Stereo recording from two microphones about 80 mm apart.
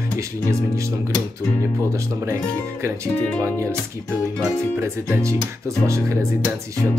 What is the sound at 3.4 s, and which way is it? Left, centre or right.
Speech, right.